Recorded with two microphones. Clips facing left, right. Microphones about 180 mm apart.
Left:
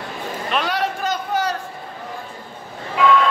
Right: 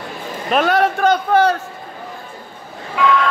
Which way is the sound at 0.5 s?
50° right (ahead or behind).